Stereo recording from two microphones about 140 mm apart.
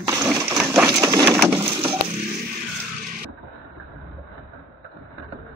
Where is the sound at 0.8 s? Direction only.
25° right (ahead or behind).